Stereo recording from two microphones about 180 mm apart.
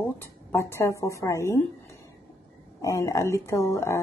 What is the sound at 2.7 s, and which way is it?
Speech, 20° left (ahead or behind).